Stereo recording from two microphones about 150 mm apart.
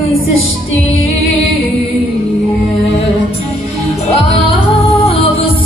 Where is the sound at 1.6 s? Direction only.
35° left (ahead or behind).